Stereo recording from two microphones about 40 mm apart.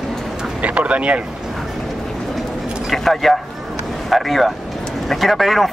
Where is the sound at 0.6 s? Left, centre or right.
Right.